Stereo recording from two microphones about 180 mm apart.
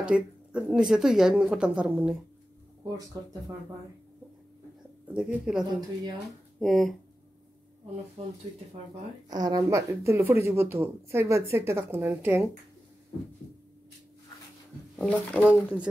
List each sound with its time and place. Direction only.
0.0 s speech: 5° right (ahead or behind)
3.1 s speech: 20° right (ahead or behind)
5.0 s speech: 5° right (ahead or behind)
8.2 s speech: 35° right (ahead or behind)
9.3 s speech: 20° right (ahead or behind)
15.0 s speech: 5° right (ahead or behind)